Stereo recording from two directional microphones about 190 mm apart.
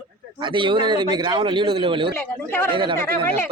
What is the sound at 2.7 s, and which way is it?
Speech, 25° right (ahead or behind).